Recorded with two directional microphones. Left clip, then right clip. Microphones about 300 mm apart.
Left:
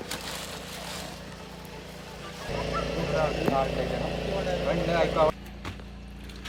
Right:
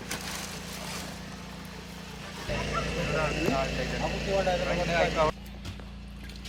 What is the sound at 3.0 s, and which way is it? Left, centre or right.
Vehicle, left.